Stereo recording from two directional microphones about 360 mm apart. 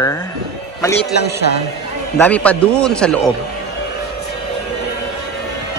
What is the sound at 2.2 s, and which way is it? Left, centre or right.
A man's voice, centre.